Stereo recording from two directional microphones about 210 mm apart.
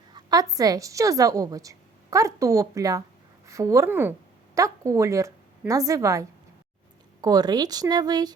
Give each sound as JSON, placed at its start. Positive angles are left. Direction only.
{"t": 0.1, "sound": "a woman's voice", "side_deg": -20}